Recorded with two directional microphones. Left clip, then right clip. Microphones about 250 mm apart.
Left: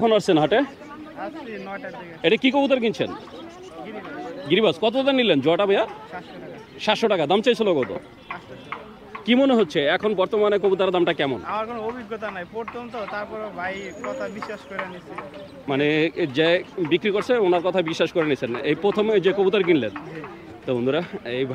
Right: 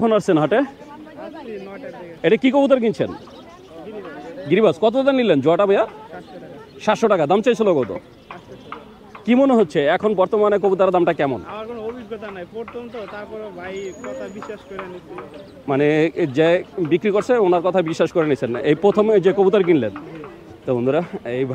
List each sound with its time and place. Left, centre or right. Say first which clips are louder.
0.0 s speech: right 1 dB; centre
2.2 s speech: right 4 dB; centre
4.5 s speech: right 4 dB; centre
9.2 s speech: right 3 dB; centre
11.4 s a sound: left 2 dB; left
13.1 s speech: left 1 dB; left
15.6 s speech: right 4 dB; centre